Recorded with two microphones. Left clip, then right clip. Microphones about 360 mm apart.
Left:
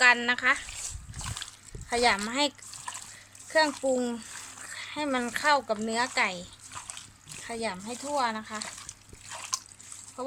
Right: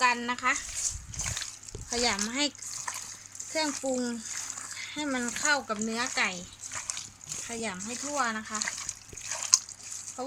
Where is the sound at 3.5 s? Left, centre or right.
Left.